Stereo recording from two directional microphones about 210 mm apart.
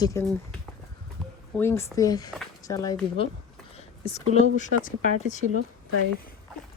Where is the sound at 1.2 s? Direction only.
Centre (ahead or behind).